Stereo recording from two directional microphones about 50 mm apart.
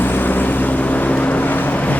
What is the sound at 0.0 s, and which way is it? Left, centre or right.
Vehicle, left.